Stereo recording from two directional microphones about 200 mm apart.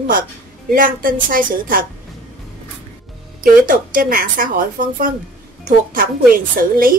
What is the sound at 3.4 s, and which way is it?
A woman's voice, 45° right (ahead or behind).